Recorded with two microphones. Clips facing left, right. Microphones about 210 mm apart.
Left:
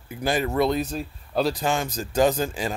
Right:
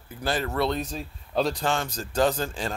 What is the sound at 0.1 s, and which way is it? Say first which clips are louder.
Speech: left 4 dB; 15° left (ahead or behind).